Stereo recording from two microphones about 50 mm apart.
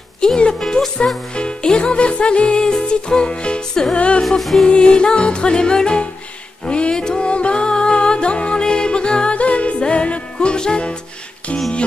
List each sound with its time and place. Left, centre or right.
0.2 s music: centre
4.2 s music: centre
4.6 s music: centre